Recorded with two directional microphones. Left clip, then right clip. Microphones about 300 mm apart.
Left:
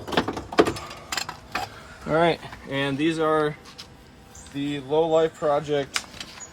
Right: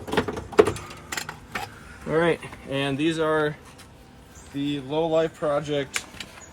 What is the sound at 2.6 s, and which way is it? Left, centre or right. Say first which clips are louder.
Speech: left 1 dB; centre.